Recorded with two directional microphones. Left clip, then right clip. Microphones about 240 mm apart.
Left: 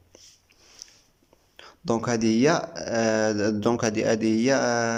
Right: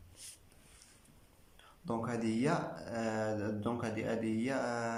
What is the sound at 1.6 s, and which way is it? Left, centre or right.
Speech, left.